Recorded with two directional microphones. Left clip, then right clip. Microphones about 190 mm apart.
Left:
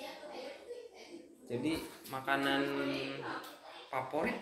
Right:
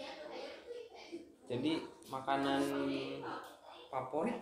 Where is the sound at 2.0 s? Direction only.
Centre (ahead or behind).